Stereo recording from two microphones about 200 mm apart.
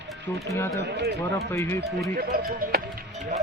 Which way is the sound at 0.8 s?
55° right (ahead or behind).